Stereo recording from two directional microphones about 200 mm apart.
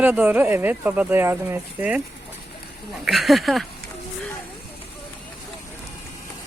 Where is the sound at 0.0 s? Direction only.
10° right (ahead or behind).